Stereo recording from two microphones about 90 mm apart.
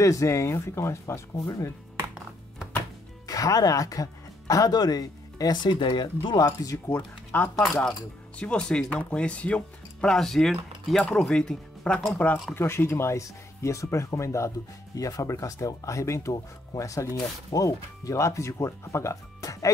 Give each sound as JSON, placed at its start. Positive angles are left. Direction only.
{"t": 0.0, "sound": "speech", "side_deg": 35}
{"t": 3.3, "sound": "speech", "side_deg": 40}
{"t": 6.3, "sound": "speech", "side_deg": 40}
{"t": 7.3, "sound": "speech", "side_deg": 20}
{"t": 12.5, "sound": "speech", "side_deg": 25}